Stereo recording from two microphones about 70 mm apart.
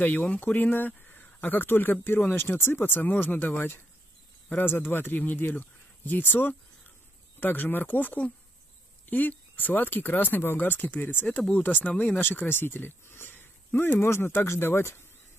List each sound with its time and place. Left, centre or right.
0.0 s speech: left